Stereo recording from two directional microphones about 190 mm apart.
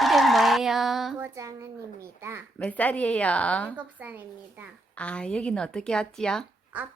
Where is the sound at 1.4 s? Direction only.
15° right (ahead or behind).